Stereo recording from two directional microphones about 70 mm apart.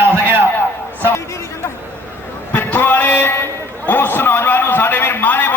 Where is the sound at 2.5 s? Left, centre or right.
Left.